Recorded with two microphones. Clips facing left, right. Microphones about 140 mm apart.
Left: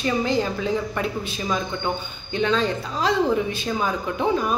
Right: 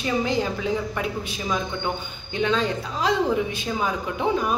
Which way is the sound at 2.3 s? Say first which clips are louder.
Left 1 dB; 15° right (ahead or behind).